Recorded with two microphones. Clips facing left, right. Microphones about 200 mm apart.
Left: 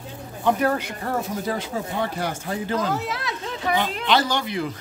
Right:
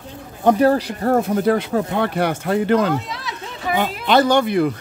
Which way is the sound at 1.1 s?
60° right (ahead or behind).